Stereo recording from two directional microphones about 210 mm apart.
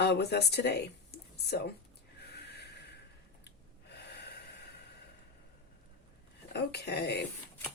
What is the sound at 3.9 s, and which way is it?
Gasp, 50° left (ahead or behind).